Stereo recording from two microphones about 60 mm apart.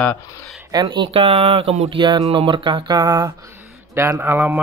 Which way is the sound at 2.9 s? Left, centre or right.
Right.